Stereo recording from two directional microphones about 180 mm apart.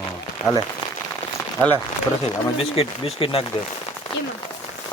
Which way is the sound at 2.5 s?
30° left (ahead or behind).